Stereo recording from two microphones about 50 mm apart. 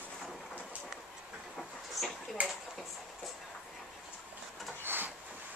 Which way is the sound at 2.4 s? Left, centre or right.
Right.